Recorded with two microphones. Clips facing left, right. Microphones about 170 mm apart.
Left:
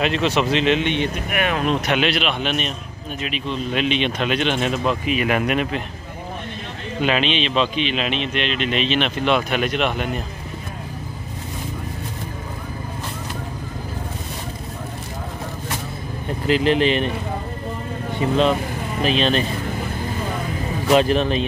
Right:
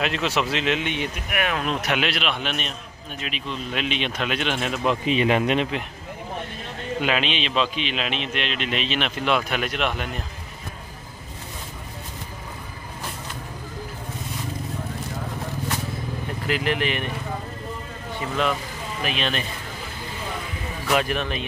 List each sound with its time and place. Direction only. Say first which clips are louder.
0.0 s a man's voice: left 5 dB; 5° right (ahead or behind)
5.0 s speech: even; 25° right (ahead or behind)
7.0 s a man's voice: left 4 dB; 5° right (ahead or behind)
16.4 s speech: left 7 dB; 25° left (ahead or behind)
18.3 s speech: left 6 dB; 25° left (ahead or behind)
20.8 s speech: left 7 dB; 25° left (ahead or behind)